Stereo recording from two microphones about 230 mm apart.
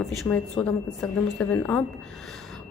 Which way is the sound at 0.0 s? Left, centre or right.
Centre.